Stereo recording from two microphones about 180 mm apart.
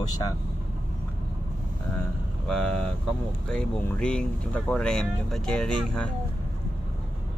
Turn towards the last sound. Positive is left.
turn(degrees=5)  # may be behind; listen again after turning